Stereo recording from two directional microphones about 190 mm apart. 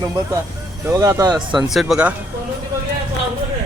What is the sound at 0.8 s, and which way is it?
Speech, 15° right (ahead or behind).